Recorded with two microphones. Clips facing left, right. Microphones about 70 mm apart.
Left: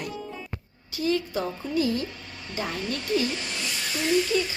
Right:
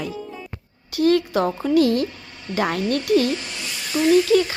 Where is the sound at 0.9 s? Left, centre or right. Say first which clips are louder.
Right 8 dB; right.